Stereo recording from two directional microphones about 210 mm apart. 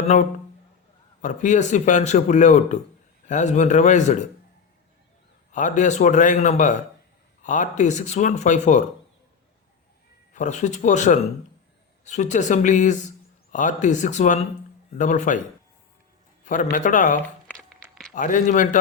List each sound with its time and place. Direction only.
1.2 s speech: 35° left (ahead or behind)
5.5 s speech: 35° left (ahead or behind)
10.3 s speech: 35° left (ahead or behind)
16.7 s speech: 40° left (ahead or behind)
17.5 s a sound: centre (ahead or behind)
18.1 s speech: 40° left (ahead or behind)